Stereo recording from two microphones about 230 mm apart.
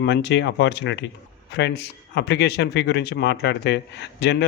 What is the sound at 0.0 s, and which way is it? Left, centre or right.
Speech, left.